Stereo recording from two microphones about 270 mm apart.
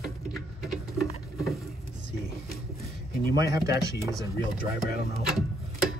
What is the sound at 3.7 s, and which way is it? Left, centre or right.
Speech, centre.